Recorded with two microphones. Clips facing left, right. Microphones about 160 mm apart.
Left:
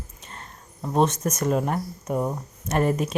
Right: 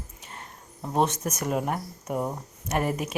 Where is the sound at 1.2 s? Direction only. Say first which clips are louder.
Left 4 dB; 10° right (ahead or behind).